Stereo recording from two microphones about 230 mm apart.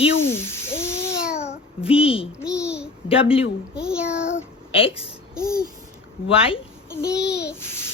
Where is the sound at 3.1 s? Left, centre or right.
Left.